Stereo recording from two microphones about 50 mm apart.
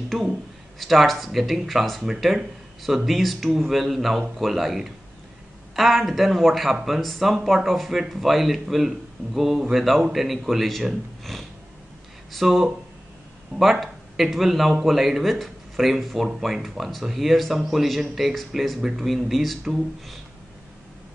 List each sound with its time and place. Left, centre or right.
0.1 s speech: centre